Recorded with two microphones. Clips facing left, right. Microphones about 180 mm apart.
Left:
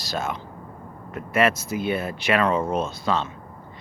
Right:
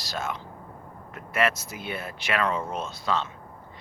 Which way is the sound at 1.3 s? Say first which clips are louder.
Left 5 dB; 20° left (ahead or behind).